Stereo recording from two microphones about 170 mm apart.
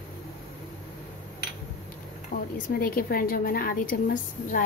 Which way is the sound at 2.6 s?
55° left (ahead or behind).